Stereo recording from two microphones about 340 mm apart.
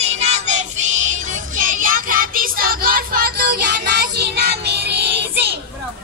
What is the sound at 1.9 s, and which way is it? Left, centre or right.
Music, right.